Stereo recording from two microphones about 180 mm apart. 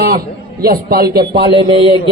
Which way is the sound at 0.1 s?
55° right (ahead or behind).